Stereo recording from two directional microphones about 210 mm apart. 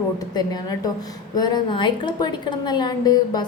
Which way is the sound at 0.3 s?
20° left (ahead or behind).